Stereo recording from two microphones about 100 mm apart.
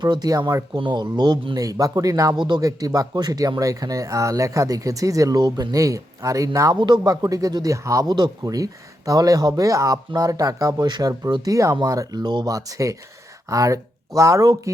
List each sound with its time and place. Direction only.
0.0 s speech: 40° right (ahead or behind)
0.8 s speech: 50° right (ahead or behind); by 6.7 s 35° right (ahead or behind)
6.7 s speech: 50° right (ahead or behind); by 14.7 s 30° right (ahead or behind)